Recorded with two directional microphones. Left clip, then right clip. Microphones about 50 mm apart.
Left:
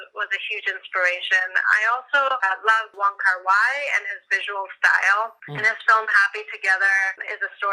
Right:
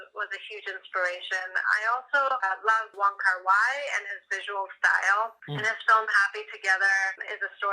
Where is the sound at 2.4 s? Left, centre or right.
Left.